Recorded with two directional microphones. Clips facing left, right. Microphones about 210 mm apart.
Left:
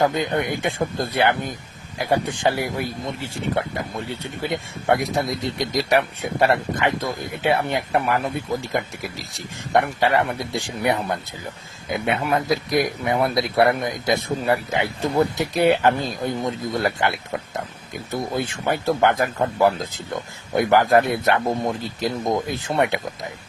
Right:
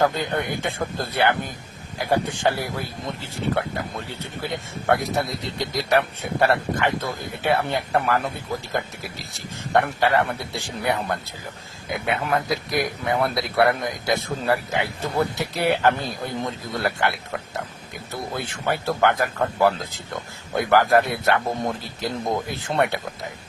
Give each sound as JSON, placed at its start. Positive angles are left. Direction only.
{"t": 0.0, "sound": "speech", "side_deg": 15}